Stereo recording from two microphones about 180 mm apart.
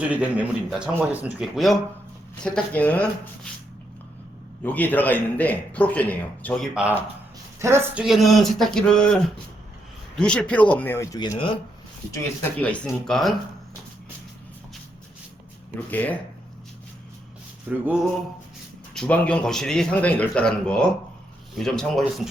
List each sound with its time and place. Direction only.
0.1 s speech: 5° right (ahead or behind)
4.6 s a man's voice: 10° left (ahead or behind)
6.7 s speech: 10° right (ahead or behind)
8.0 s a man's voice: centre (ahead or behind); by 11.6 s 30° left (ahead or behind)
12.1 s speech: 10° left (ahead or behind)
15.9 s a man's voice: 10° left (ahead or behind)
17.7 s speech: 5° right (ahead or behind)
18.9 s speech: 5° left (ahead or behind)